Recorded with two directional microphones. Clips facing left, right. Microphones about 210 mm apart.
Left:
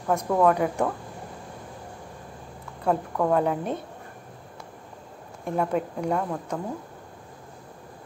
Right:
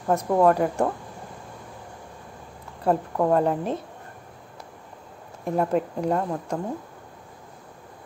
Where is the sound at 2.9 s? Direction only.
25° right (ahead or behind).